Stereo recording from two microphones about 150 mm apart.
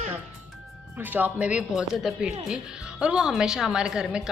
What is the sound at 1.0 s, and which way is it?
A woman's voice, 10° right (ahead or behind).